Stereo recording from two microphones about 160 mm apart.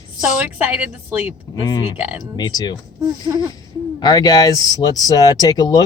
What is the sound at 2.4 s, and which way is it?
Speech, 25° left (ahead or behind).